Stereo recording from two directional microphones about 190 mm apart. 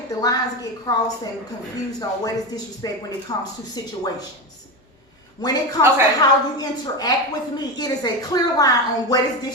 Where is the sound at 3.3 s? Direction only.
20° left (ahead or behind).